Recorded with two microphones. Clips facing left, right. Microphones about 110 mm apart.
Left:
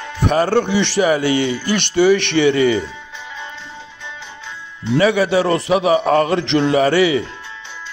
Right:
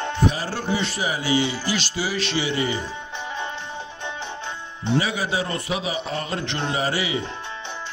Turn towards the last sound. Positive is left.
turn(degrees=65)  # may be behind; listen again after turning